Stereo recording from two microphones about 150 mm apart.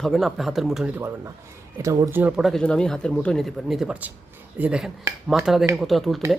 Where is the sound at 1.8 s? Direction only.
20° right (ahead or behind).